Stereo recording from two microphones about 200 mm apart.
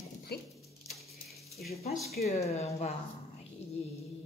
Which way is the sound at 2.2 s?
30° left (ahead or behind).